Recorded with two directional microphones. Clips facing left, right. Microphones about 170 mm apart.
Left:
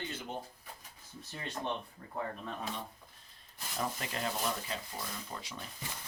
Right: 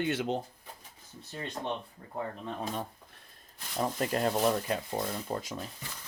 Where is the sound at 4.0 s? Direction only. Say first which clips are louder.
Right 9 dB; 45° right (ahead or behind).